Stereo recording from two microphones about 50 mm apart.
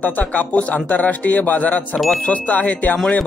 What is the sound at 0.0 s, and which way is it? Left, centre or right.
Speech, left.